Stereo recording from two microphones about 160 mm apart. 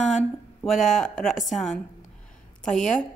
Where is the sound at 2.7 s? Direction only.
50° left (ahead or behind).